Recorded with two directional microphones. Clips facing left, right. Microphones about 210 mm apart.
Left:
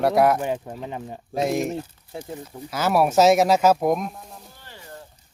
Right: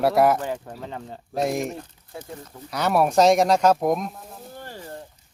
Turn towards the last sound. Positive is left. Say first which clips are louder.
# right 9 dB
turn(degrees=-45)  # may be behind; listen again after turning